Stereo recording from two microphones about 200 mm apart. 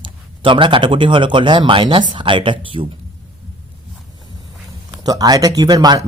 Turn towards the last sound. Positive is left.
turn(degrees=-20)  # may be behind; listen again after turning